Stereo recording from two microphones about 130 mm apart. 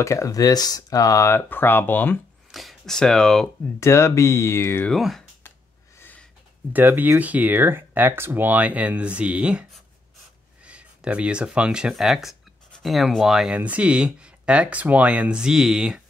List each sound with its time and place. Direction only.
0.0 s speech: 25° left (ahead or behind)
2.5 s speech: centre (ahead or behind)
3.8 s speech: 20° left (ahead or behind)
4.8 s speech: centre (ahead or behind)
5.9 s a sound: 15° left (ahead or behind)
6.7 s speech: 15° right (ahead or behind)